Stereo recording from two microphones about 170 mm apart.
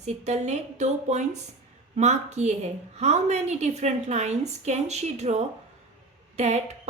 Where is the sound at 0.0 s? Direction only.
40° right (ahead or behind).